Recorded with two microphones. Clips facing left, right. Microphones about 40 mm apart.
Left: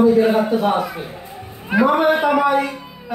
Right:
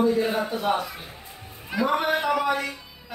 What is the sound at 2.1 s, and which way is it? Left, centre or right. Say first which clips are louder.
Speech: left 7 dB; left.